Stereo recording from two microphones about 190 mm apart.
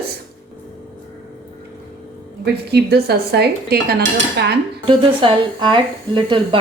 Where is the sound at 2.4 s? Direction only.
60° right (ahead or behind).